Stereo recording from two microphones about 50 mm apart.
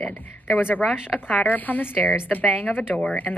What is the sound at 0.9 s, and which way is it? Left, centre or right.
Speech, centre.